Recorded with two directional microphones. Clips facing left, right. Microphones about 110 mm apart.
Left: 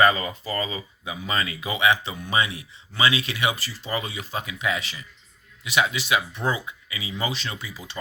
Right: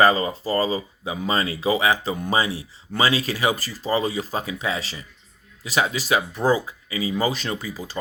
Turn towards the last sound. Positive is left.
turn(degrees=-40)  # may be behind; listen again after turning